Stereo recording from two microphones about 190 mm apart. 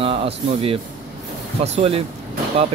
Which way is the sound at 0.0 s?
30° right (ahead or behind).